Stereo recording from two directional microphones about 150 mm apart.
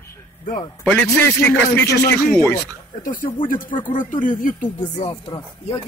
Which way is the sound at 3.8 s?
60° left (ahead or behind).